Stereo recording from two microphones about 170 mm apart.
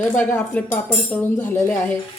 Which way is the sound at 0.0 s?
10° left (ahead or behind).